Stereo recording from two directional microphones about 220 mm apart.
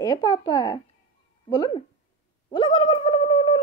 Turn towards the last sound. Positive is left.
turn(degrees=20)  # may be behind; listen again after turning